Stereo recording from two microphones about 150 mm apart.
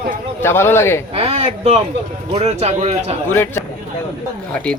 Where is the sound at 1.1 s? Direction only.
40° right (ahead or behind).